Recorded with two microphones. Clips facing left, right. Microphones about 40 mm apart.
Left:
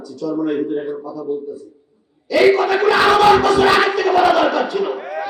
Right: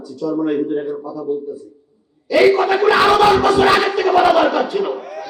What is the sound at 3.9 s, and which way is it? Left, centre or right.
Battle cry, centre.